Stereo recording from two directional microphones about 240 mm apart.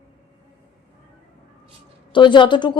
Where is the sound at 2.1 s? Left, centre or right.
Centre.